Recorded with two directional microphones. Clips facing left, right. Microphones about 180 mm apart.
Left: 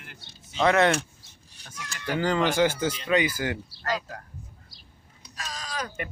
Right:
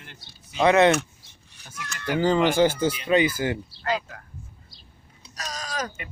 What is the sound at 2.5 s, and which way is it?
Speech, 30° right (ahead or behind).